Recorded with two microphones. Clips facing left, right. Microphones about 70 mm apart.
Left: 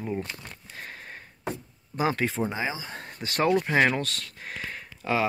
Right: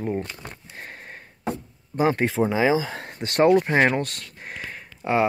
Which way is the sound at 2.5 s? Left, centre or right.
Right.